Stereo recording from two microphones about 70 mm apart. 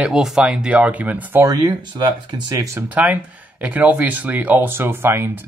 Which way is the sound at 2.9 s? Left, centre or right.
Right.